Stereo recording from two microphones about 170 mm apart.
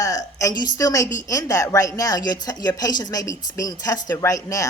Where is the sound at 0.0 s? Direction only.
20° left (ahead or behind).